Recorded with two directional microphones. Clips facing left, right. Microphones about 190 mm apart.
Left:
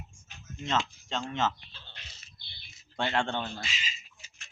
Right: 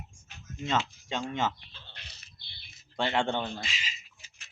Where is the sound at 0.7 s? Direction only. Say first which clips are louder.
Even; 10° right (ahead or behind).